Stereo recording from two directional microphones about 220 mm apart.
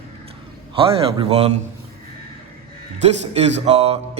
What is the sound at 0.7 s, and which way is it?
Speech, 25° right (ahead or behind).